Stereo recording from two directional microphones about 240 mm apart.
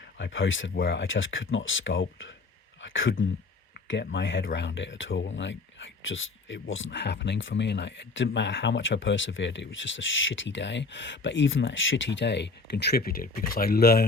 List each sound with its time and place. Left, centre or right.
0.2 s speech: left